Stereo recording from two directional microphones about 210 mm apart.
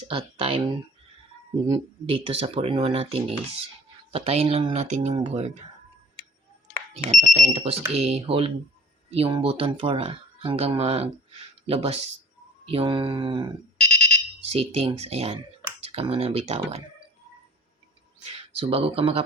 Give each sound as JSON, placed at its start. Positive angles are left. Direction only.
{"t": 0.1, "sound": "speech", "side_deg": -25}
{"t": 1.6, "sound": "speech", "side_deg": -25}
{"t": 6.9, "sound": "speech", "side_deg": -35}
{"t": 13.7, "sound": "ringtone", "side_deg": 5}
{"t": 14.4, "sound": "speech", "side_deg": -30}
{"t": 18.2, "sound": "a sound", "side_deg": -25}